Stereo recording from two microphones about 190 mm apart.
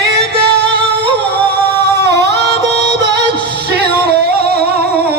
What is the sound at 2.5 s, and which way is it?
Music, 60° right (ahead or behind).